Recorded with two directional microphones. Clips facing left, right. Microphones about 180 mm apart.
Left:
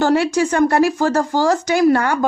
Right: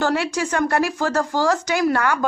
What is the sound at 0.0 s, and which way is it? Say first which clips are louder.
Speech: left 6 dB; 30° left (ahead or behind).